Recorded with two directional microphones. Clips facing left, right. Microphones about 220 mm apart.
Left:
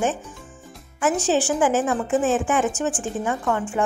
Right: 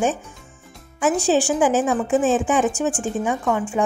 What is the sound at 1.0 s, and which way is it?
A woman's voice, 15° right (ahead or behind).